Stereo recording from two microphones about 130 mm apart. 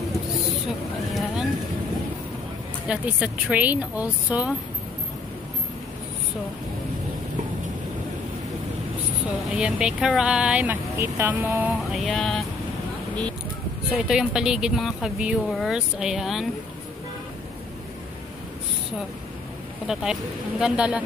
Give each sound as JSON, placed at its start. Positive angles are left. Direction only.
{"t": 1.1, "sound": "boat", "side_deg": 0}
{"t": 2.9, "sound": "speech", "side_deg": -10}
{"t": 9.6, "sound": "speech", "side_deg": -5}
{"t": 11.9, "sound": "speech", "side_deg": 0}
{"t": 13.9, "sound": "speech", "side_deg": -5}
{"t": 19.9, "sound": "speech", "side_deg": -5}